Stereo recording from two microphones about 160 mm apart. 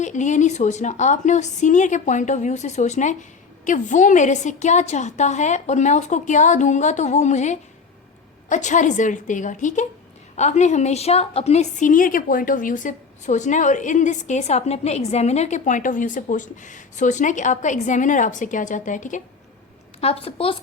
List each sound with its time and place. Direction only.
0.0 s a woman's voice: 50° left (ahead or behind)
20.0 s a woman's voice: 40° left (ahead or behind)